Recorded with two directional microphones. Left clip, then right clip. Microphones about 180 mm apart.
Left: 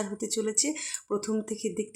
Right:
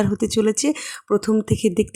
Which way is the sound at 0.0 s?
45° right (ahead or behind).